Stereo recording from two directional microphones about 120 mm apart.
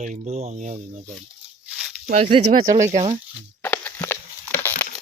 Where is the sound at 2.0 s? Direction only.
65° right (ahead or behind).